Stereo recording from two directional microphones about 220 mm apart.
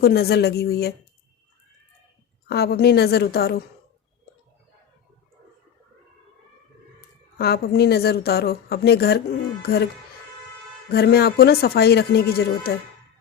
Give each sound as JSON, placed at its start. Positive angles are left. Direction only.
{"t": 0.0, "sound": "speech", "side_deg": 45}
{"t": 2.5, "sound": "speech", "side_deg": 45}
{"t": 7.3, "sound": "speech", "side_deg": 45}